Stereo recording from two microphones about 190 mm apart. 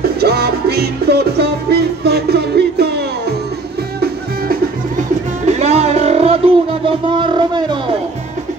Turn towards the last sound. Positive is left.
turn(degrees=-25)  # may be behind; listen again after turning